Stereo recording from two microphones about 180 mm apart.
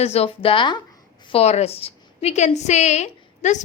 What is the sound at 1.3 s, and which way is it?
A woman's voice, 35° left (ahead or behind).